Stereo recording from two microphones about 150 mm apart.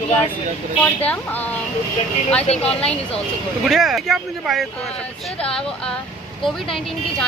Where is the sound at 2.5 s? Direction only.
45° left (ahead or behind).